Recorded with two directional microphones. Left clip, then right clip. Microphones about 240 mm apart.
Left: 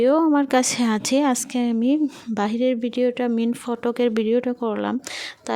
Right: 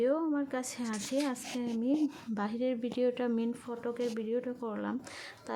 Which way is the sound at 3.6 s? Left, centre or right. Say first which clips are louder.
Left 13 dB; left.